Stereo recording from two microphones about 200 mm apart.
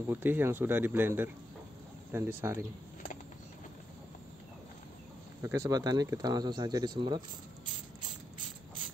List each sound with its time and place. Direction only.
0.0 s speech: 10° right (ahead or behind)
5.4 s speech: 15° right (ahead or behind)